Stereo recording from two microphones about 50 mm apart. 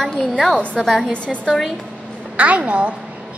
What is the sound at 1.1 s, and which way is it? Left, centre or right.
Speech, left.